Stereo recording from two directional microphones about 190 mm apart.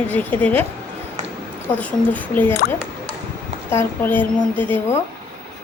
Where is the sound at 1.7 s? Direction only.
10° left (ahead or behind).